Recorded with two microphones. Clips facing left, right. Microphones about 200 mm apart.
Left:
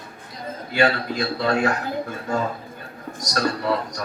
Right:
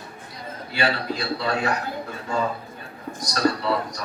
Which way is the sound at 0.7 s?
45° left (ahead or behind).